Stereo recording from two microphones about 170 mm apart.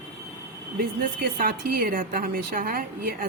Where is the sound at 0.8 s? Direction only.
60° right (ahead or behind).